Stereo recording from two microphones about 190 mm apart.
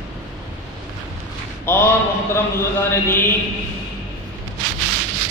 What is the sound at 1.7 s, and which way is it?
Speech, 10° left (ahead or behind).